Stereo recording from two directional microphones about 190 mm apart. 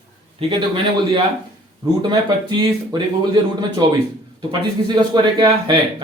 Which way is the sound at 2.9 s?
20° right (ahead or behind).